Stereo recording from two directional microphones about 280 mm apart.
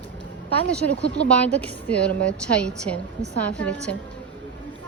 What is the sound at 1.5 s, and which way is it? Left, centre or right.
A woman's voice, centre.